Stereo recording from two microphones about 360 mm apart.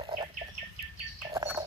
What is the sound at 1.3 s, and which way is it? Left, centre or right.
Bird, centre.